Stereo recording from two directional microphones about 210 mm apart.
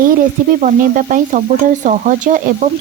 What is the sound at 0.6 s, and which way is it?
Speech, 40° right (ahead or behind).